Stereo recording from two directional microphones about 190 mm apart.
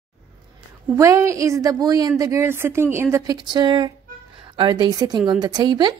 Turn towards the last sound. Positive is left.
turn(degrees=-20)  # may be behind; listen again after turning